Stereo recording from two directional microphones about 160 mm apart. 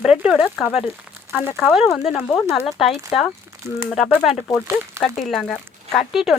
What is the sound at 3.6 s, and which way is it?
Speech, 20° right (ahead or behind).